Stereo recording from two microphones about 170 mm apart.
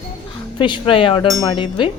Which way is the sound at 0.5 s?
30° left (ahead or behind).